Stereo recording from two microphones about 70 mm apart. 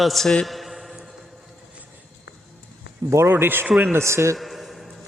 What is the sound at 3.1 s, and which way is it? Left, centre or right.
Speech, right.